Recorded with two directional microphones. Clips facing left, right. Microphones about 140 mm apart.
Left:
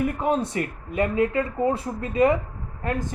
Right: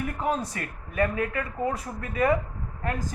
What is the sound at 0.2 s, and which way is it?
Speech, 25° left (ahead or behind).